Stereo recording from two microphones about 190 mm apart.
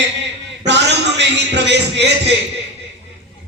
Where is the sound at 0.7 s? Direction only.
65° right (ahead or behind).